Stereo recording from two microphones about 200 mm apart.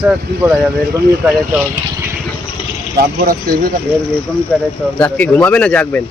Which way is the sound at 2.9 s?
50° right (ahead or behind).